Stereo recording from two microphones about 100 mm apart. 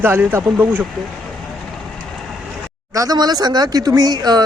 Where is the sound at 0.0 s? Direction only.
20° right (ahead or behind).